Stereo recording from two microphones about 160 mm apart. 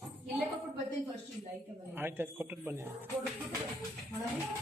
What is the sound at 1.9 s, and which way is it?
Speech, 15° right (ahead or behind).